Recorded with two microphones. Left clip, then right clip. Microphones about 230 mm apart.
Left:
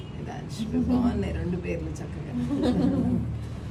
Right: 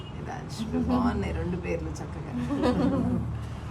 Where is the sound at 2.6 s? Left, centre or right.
Right.